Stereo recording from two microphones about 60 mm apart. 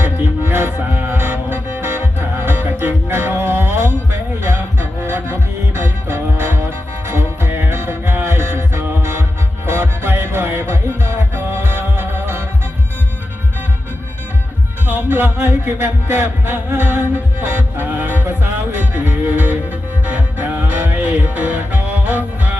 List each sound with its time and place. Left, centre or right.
0.0 s music: right
5.0 s music: right
14.8 s music: right